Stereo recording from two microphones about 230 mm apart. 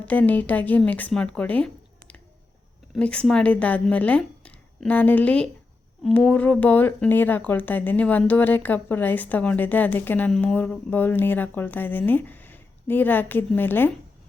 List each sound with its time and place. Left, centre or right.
0.0 s speech: centre